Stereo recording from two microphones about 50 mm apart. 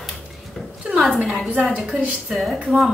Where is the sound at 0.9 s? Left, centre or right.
Centre.